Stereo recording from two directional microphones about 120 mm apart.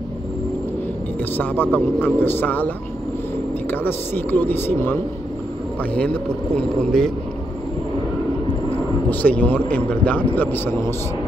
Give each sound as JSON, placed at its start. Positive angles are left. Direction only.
{"t": 1.3, "sound": "speech", "side_deg": 15}
{"t": 3.7, "sound": "speech", "side_deg": 15}
{"t": 9.1, "sound": "speech", "side_deg": 15}